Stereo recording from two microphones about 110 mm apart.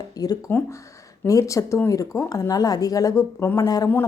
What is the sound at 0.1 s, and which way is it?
Speech, 35° left (ahead or behind).